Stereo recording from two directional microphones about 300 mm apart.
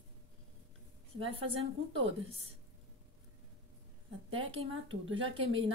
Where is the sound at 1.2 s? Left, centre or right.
Centre.